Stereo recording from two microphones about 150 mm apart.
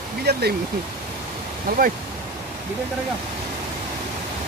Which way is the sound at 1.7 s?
90° right.